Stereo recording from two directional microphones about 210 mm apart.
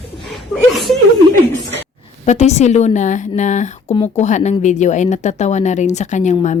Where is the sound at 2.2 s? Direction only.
30° left (ahead or behind).